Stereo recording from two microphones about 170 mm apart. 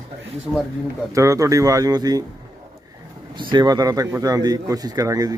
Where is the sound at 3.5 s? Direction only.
25° right (ahead or behind).